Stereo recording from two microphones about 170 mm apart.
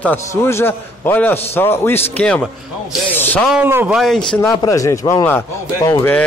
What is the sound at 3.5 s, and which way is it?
A man's voice, 10° right (ahead or behind).